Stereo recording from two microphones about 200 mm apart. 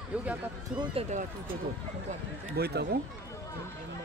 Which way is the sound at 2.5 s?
55° right (ahead or behind).